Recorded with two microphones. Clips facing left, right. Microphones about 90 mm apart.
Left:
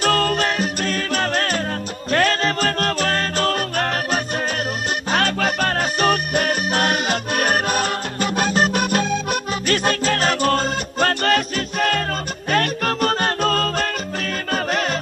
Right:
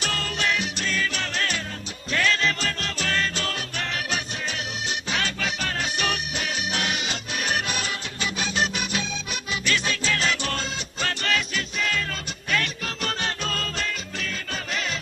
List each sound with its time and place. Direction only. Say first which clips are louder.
0.0 s music: left 9 dB; 50° left (ahead or behind)